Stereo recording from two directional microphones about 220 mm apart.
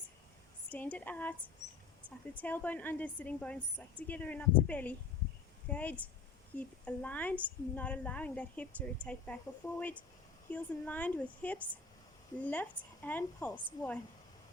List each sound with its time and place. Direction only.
0.7 s a woman's voice: 5° left (ahead or behind)
2.4 s a woman's voice: 10° left (ahead or behind)
10.5 s a woman's voice: 5° left (ahead or behind)